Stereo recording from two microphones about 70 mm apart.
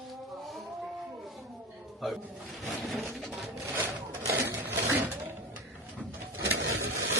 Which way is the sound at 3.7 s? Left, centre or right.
Right.